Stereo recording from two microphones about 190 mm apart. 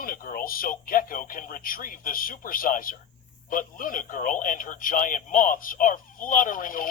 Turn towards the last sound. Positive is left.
turn(degrees=45)  # may be behind; listen again after turning